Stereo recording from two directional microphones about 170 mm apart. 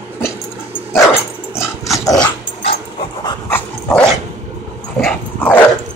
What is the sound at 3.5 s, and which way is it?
Dog, 5° left (ahead or behind).